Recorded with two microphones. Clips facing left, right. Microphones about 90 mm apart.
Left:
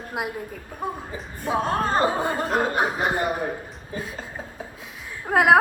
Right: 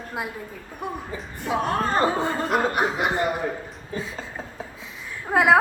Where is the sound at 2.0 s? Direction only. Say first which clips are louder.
Even; 15° left (ahead or behind).